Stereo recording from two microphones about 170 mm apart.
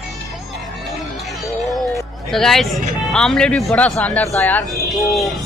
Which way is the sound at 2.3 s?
Centre (ahead or behind).